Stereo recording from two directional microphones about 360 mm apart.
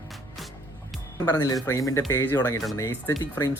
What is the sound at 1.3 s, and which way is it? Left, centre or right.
Speech, centre.